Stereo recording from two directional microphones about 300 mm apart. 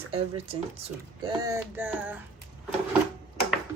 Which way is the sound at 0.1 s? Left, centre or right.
Centre.